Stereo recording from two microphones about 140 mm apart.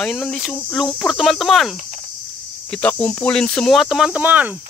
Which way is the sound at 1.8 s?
60° right (ahead or behind).